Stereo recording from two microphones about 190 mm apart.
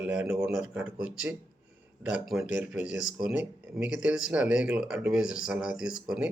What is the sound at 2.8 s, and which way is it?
Speech, 40° left (ahead or behind).